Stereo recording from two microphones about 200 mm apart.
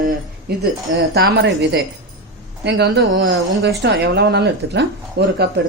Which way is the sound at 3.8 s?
60° right (ahead or behind).